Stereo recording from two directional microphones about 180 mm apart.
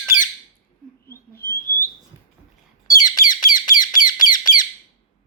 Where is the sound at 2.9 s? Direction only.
20° left (ahead or behind).